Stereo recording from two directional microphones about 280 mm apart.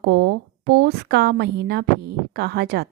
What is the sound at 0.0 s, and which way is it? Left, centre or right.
A woman's voice, right.